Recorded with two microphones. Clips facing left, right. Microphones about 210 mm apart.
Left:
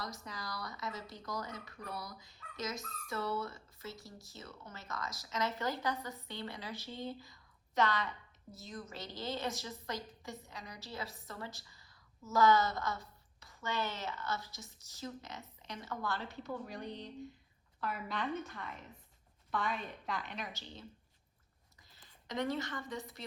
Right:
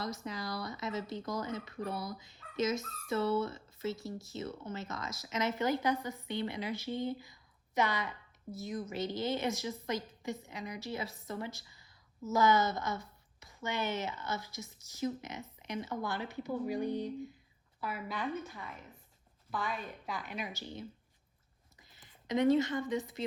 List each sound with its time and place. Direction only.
0.0 s a woman's voice: 25° right (ahead or behind); by 20.5 s 5° right (ahead or behind)
21.9 s speech: 20° right (ahead or behind)